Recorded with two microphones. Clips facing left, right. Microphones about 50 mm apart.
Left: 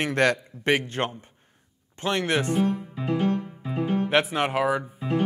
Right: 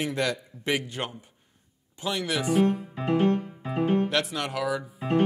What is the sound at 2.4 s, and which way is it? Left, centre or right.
Speech, centre.